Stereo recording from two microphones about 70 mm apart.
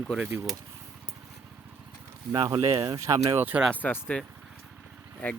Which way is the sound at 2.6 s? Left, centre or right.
Right.